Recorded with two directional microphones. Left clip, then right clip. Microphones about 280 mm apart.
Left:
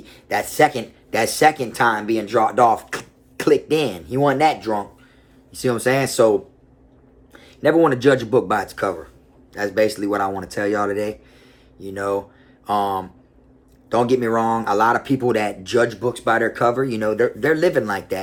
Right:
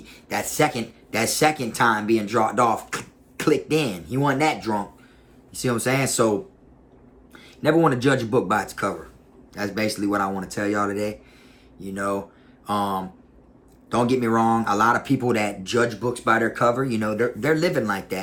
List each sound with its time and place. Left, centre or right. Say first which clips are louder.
0.0 s speech: left 5 dB; centre
7.3 s speech: left 4 dB; centre